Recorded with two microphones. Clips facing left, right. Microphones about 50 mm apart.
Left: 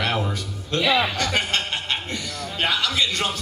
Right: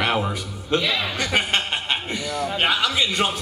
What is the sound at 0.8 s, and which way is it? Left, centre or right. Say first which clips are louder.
Speech: left 4 dB; centre.